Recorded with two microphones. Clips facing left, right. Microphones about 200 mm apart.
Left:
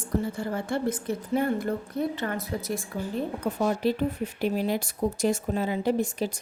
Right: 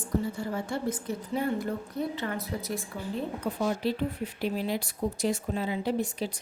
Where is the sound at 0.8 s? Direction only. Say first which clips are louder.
Left 4 dB; 60° left (ahead or behind).